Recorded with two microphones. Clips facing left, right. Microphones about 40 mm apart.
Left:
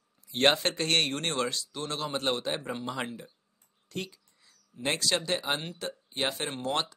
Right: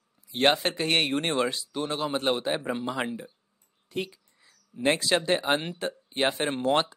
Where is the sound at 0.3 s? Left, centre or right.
Centre.